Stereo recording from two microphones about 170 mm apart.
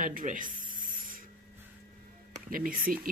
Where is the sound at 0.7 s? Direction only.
55° right (ahead or behind).